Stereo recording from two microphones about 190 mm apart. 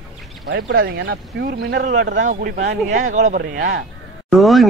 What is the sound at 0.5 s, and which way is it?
Speech, 80° right.